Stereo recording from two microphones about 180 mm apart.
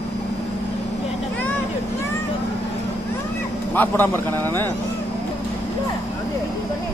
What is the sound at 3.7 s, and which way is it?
Speech, 10° left (ahead or behind).